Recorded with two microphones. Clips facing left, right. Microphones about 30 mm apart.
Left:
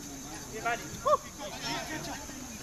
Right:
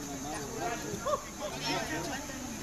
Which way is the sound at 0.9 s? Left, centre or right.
Centre.